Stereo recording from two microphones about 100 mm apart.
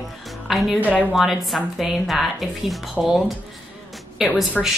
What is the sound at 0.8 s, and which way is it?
Speech, 15° left (ahead or behind).